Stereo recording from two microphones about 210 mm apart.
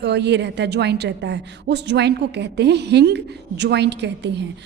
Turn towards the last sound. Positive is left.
turn(degrees=-55)  # may be behind; listen again after turning